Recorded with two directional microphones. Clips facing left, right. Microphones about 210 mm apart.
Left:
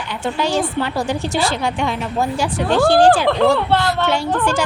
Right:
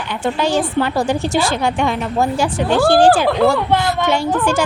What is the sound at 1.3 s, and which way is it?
Speech, 50° right (ahead or behind).